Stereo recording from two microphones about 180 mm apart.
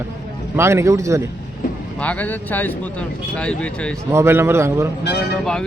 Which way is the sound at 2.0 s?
10° left (ahead or behind).